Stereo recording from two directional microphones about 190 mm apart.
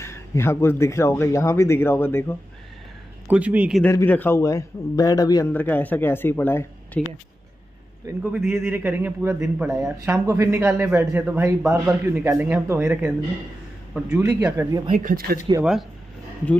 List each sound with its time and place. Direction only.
0.0 s speech: 15° left (ahead or behind)
3.3 s a man's voice: 5° right (ahead or behind)
3.8 s speech: 10° left (ahead or behind)
5.5 s speech: 10° left (ahead or behind)
8.1 s a man's voice: 10° right (ahead or behind)
14.9 s speech: 45° right (ahead or behind)